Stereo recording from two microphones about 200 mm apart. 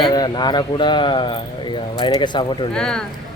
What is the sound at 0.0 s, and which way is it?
Speech, 20° left (ahead or behind).